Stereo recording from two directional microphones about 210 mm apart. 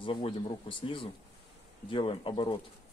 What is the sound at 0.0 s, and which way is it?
Speech, 25° left (ahead or behind).